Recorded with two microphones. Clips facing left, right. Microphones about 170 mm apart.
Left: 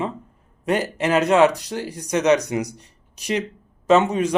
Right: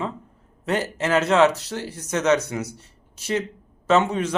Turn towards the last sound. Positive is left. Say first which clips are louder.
# left 3 dB
turn(degrees=15)  # may be behind; listen again after turning